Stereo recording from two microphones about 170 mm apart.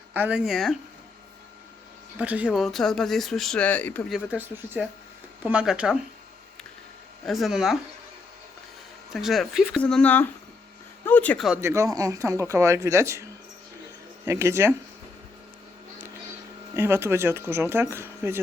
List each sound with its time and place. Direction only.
0.1 s speech: 10° right (ahead or behind)
2.1 s speech: 10° right (ahead or behind); by 4.0 s 10° left (ahead or behind)
4.1 s speech: 10° right (ahead or behind)
7.3 s speech: centre (ahead or behind)
9.1 s speech: centre (ahead or behind)
11.5 s speech: 15° right (ahead or behind)
14.3 s speech: 15° right (ahead or behind)
16.7 s speech: 15° right (ahead or behind)